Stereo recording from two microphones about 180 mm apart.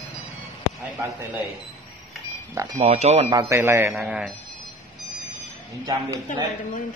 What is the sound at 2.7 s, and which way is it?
Speech, 40° right (ahead or behind).